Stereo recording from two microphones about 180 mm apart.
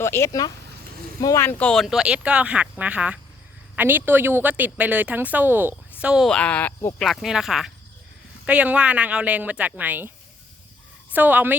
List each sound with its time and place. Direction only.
0.0 s a woman's voice: 15° left (ahead or behind); by 10.1 s 10° right (ahead or behind)
11.1 s a woman's voice: 10° right (ahead or behind)